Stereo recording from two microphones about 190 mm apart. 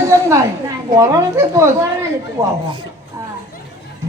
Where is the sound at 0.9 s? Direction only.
15° right (ahead or behind).